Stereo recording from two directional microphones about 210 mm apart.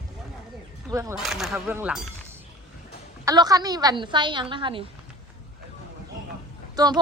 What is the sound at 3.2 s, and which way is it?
A woman's voice, 20° right (ahead or behind).